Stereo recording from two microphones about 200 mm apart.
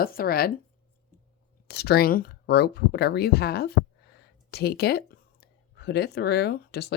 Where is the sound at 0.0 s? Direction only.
50° left (ahead or behind).